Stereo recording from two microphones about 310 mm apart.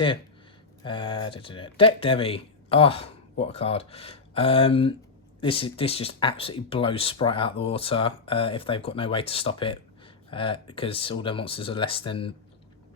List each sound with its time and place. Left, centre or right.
0.9 s speech: centre